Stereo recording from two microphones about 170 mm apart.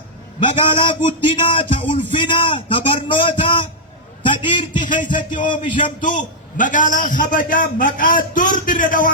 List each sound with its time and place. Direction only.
0.4 s a man's voice: 30° left (ahead or behind)
4.2 s a sound: 30° left (ahead or behind)
5.1 s a man's voice: 50° left (ahead or behind)